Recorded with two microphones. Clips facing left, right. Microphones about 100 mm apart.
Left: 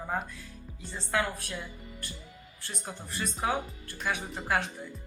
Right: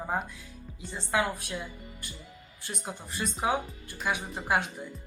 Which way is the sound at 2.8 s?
15° right (ahead or behind).